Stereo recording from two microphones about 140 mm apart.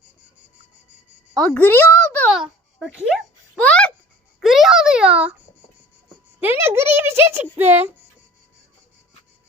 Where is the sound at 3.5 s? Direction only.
10° left (ahead or behind).